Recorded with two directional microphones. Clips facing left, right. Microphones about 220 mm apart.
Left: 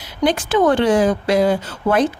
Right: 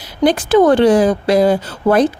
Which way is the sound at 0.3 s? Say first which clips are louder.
Right 5 dB; 35° right (ahead or behind).